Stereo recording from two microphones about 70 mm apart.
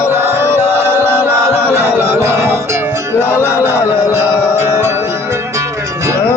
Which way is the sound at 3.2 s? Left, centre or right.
Left.